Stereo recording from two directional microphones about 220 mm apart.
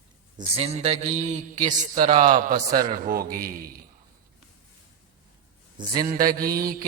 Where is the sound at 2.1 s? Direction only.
25° right (ahead or behind).